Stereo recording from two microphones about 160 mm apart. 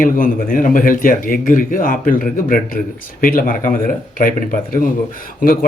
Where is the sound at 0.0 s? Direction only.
60° left (ahead or behind).